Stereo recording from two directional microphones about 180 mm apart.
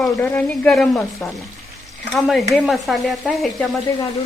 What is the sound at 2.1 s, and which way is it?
Stir, centre (ahead or behind).